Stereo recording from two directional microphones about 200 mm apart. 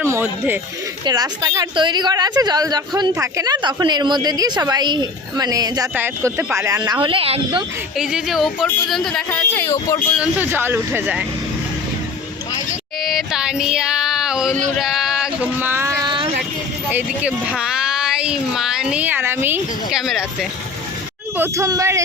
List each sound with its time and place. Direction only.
0.0 s a sound: 10° right (ahead or behind)
1.0 s a woman's voice: 20° right (ahead or behind)
7.9 s music: centre (ahead or behind)
8.9 s speech: centre (ahead or behind)
10.2 s speech: 10° right (ahead or behind)
13.1 s music: centre (ahead or behind)
14.8 s a sound: centre (ahead or behind); by 16.3 s 25° right (ahead or behind)
16.9 s speech: 5° right (ahead or behind)
21.3 s speech: 15° right (ahead or behind)